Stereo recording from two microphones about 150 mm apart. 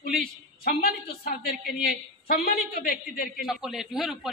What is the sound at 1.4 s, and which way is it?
A man's voice, 90° left.